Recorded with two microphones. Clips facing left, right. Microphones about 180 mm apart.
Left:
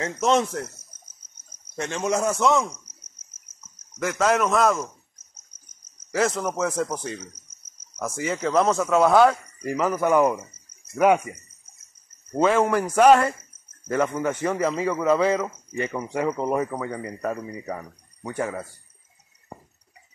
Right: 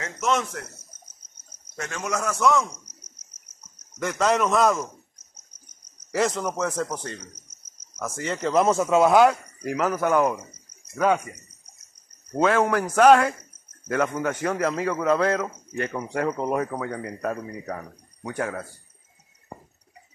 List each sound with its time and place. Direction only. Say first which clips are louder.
0.0 s speech: left 4 dB; 30° left (ahead or behind)
1.8 s a man's voice: left 5 dB; 25° left (ahead or behind)
4.0 s speech: left 1 dB; centre (ahead or behind)
6.1 s speech: left 1 dB; centre (ahead or behind)
8.8 s speech: even; 20° right (ahead or behind)
9.1 s speech: even; 5° right (ahead or behind)
12.3 s speech: left 1 dB; 5° left (ahead or behind)